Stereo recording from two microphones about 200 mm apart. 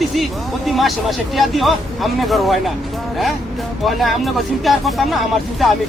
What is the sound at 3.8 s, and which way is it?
Speech, centre (ahead or behind).